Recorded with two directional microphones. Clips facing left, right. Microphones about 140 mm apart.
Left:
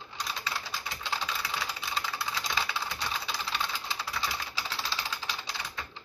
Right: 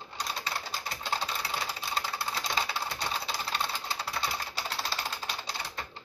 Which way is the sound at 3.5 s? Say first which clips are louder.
Right 1 dB; 35° right (ahead or behind).